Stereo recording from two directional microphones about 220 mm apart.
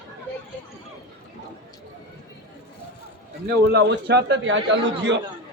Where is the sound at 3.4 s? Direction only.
50° right (ahead or behind).